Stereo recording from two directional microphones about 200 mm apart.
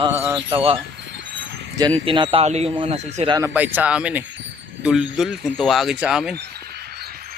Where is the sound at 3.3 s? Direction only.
10° right (ahead or behind).